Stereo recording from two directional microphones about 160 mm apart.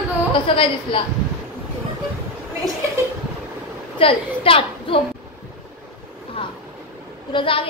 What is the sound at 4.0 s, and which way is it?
A woman's voice, 35° left (ahead or behind).